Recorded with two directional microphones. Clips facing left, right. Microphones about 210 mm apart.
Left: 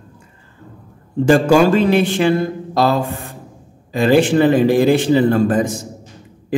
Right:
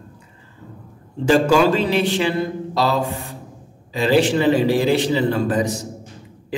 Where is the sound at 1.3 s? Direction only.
50° left (ahead or behind).